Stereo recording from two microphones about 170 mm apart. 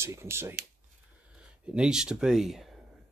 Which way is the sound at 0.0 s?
15° right (ahead or behind).